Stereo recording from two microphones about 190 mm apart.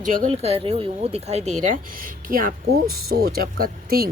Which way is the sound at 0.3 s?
30° right (ahead or behind).